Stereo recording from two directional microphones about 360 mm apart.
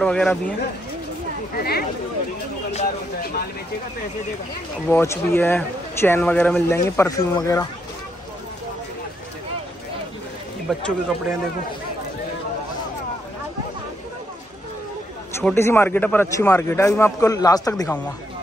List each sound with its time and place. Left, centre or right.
0.0 s speech: centre
1.6 s speech: left
4.8 s speech: centre
10.7 s speech: centre
15.4 s speech: centre